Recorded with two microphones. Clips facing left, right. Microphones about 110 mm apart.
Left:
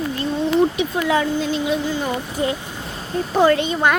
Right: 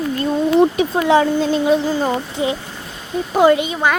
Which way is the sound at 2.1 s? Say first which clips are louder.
Right 2 dB; 20° right (ahead or behind).